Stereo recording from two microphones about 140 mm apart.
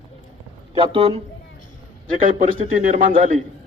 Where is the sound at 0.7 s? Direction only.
45° right (ahead or behind).